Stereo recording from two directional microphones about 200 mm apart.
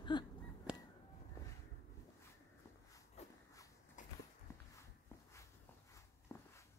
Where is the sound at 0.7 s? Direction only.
5° right (ahead or behind).